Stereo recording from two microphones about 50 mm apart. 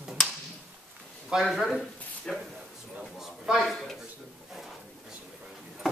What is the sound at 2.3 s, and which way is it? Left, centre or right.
Speech, centre.